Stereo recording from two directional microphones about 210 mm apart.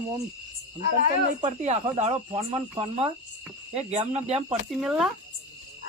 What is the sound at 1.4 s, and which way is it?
Speech, 30° right (ahead or behind).